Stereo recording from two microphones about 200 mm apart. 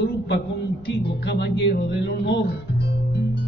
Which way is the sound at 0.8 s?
55° left (ahead or behind).